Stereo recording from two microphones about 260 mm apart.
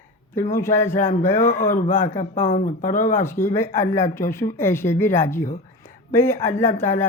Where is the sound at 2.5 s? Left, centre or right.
Left.